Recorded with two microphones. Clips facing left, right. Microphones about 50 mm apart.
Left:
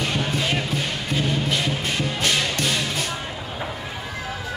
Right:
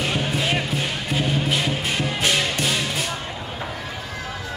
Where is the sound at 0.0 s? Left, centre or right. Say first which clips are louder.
Right 1 dB; centre.